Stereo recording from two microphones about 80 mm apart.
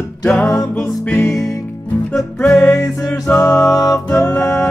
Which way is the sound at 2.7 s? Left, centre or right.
Left.